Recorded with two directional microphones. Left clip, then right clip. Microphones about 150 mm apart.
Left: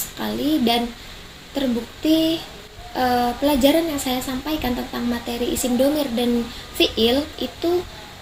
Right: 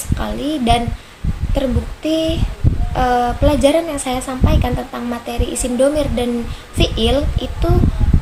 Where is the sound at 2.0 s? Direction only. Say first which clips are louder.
Right 1 dB; 50° right (ahead or behind).